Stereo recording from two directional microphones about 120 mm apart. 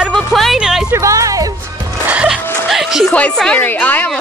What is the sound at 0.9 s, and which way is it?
Music, 25° right (ahead or behind).